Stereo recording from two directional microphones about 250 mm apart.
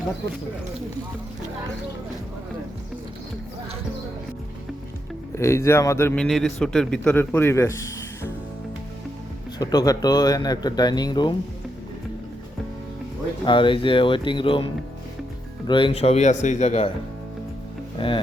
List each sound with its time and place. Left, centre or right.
5.4 s a man's voice: centre
9.6 s a man's voice: centre
13.4 s speech: centre
17.9 s speech: centre